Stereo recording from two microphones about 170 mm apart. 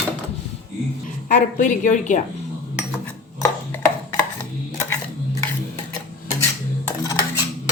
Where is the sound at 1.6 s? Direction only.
45° left (ahead or behind).